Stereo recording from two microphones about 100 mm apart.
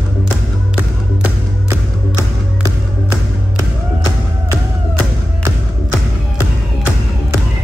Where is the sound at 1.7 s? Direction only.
30° right (ahead or behind).